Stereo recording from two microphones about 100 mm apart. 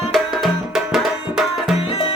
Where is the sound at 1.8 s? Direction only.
75° left (ahead or behind).